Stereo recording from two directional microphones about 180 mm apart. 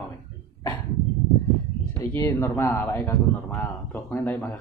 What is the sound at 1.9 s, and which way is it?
Speech, 15° left (ahead or behind).